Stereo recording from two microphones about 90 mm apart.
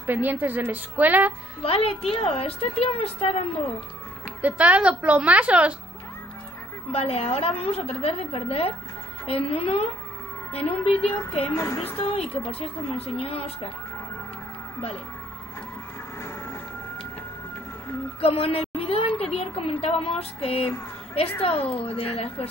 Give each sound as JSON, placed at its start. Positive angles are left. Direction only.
{"t": 0.0, "sound": "a woman's voice", "side_deg": -20}
{"t": 1.6, "sound": "a woman's voice", "side_deg": 90}
{"t": 4.4, "sound": "a woman's voice", "side_deg": -15}
{"t": 7.0, "sound": "a woman's voice", "side_deg": 90}
{"t": 11.5, "sound": "speech", "side_deg": 30}
{"t": 12.0, "sound": "a woman's voice", "side_deg": 90}
{"t": 18.2, "sound": "a woman's voice", "side_deg": 90}